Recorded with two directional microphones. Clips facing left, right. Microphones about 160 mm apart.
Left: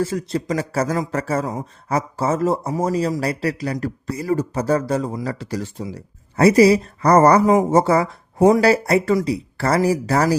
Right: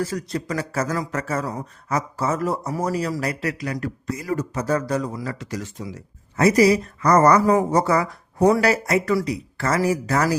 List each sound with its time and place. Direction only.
0.0 s speech: 25° left (ahead or behind)